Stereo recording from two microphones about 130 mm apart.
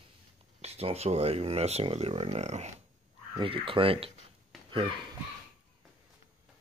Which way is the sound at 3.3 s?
45° right (ahead or behind).